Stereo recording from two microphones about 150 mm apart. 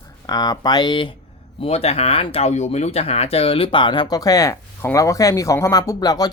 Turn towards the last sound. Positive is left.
turn(degrees=25)  # may be behind; listen again after turning